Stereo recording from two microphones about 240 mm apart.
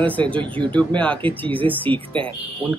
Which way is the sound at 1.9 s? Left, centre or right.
Right.